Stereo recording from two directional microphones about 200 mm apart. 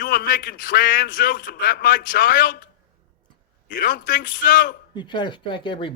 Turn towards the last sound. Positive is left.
turn(degrees=25)  # may be behind; listen again after turning